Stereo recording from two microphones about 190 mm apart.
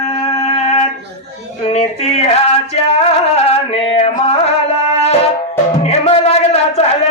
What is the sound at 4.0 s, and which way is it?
Music, 30° left (ahead or behind).